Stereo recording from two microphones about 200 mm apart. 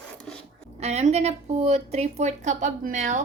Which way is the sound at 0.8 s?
30° right (ahead or behind).